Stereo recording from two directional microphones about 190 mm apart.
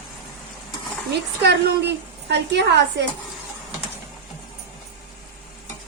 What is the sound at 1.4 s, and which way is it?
A woman's voice, 60° right (ahead or behind).